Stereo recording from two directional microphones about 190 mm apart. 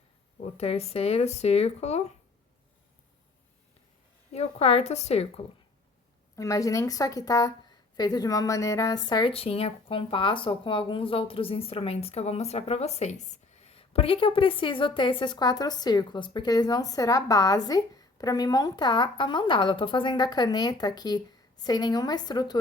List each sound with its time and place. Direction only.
0.5 s speech: 35° left (ahead or behind)
4.3 s speech: 35° left (ahead or behind)
6.3 s a woman's voice: 15° left (ahead or behind)